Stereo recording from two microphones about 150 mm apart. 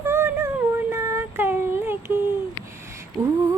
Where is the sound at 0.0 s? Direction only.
15° right (ahead or behind).